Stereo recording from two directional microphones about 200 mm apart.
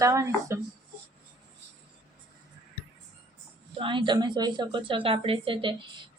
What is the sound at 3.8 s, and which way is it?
A woman's voice, 25° right (ahead or behind).